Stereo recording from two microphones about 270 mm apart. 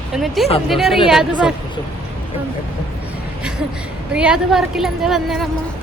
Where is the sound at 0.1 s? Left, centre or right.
Centre.